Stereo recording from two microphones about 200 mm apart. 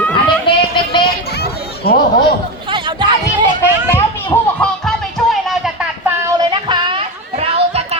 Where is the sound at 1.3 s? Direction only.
50° left (ahead or behind).